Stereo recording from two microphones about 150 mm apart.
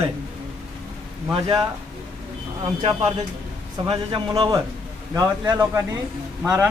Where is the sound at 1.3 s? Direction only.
35° right (ahead or behind).